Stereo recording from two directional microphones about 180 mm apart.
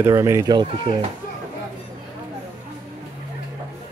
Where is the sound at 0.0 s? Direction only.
15° right (ahead or behind).